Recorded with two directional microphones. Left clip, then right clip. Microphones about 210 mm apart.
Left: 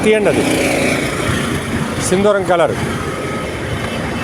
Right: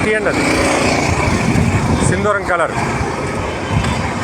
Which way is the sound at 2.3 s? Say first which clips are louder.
Left 3 dB; 50° left (ahead or behind).